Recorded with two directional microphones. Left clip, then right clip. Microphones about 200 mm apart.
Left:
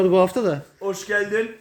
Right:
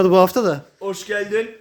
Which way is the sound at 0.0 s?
40° right (ahead or behind).